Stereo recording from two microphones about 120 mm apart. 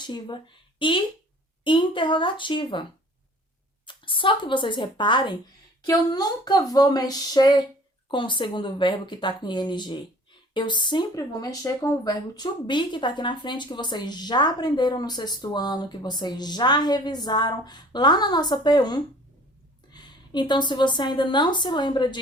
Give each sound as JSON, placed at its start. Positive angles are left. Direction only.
{"t": 0.0, "sound": "speech", "side_deg": 40}
{"t": 3.8, "sound": "a woman's voice", "side_deg": 45}